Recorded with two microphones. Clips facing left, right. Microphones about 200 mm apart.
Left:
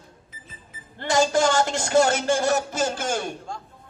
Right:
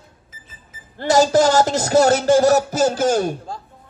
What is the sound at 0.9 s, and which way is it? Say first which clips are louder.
Speech: right 6 dB; 40° right (ahead or behind).